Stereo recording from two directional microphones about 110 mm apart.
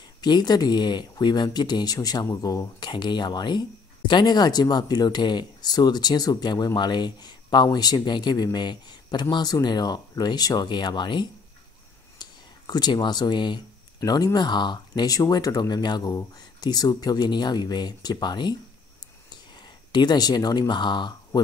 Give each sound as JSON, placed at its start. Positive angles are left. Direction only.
{"t": 0.2, "sound": "speech", "side_deg": 40}
{"t": 19.9, "sound": "speech", "side_deg": 40}